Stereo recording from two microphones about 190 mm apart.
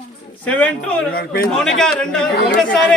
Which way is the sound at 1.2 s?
50° left (ahead or behind).